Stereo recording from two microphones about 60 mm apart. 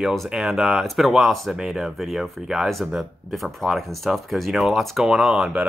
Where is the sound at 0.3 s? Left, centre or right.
Centre.